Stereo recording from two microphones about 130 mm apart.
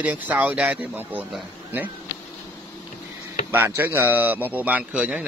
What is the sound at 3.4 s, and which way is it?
Speech, 15° right (ahead or behind).